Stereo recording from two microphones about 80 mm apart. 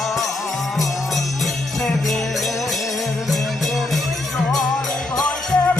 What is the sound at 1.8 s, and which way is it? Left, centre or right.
Jingle bell, centre.